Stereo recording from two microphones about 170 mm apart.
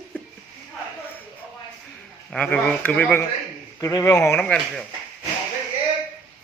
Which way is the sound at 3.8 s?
20° left (ahead or behind).